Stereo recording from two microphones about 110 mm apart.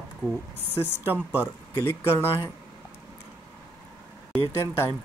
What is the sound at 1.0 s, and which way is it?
Speech, 15° right (ahead or behind).